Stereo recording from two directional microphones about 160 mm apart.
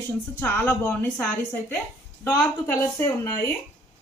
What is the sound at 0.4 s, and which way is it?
A woman's voice, 10° left (ahead or behind).